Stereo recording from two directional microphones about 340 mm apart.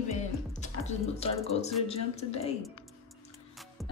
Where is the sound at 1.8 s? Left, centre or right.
Centre.